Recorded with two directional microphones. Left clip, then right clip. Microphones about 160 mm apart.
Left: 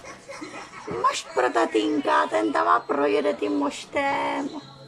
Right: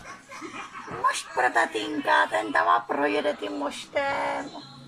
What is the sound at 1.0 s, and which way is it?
Speech, centre (ahead or behind).